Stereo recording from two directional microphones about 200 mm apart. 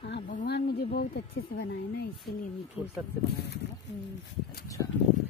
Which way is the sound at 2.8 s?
5° right (ahead or behind).